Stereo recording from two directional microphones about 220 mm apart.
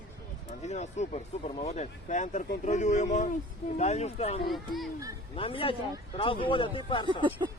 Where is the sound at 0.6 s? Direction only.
30° left (ahead or behind).